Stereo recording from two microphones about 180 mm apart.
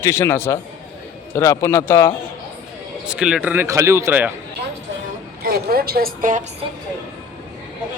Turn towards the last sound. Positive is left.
turn(degrees=-45)  # may be behind; listen again after turning